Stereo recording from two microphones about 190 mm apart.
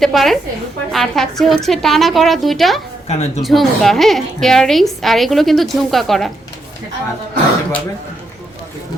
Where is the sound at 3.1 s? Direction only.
35° left (ahead or behind).